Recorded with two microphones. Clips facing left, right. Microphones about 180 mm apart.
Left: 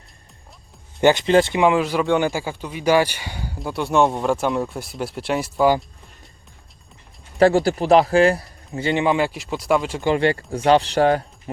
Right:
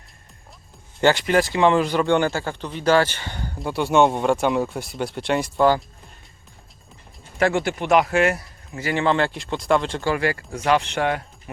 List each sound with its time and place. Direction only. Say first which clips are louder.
1.0 s speech: left 3 dB; 20° left (ahead or behind)
1.5 s speech: even; 5° left (ahead or behind)
7.3 s speech: left 5 dB; 35° left (ahead or behind); by 10.0 s 5° left (ahead or behind)
10.0 s speech: left 4 dB; 25° left (ahead or behind)